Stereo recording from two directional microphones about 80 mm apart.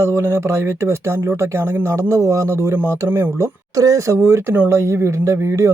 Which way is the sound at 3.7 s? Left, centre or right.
Right.